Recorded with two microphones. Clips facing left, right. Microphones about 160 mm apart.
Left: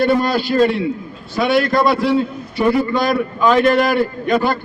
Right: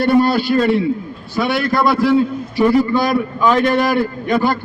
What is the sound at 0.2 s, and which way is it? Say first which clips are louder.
A man's voice: right 1 dB; centre (ahead or behind).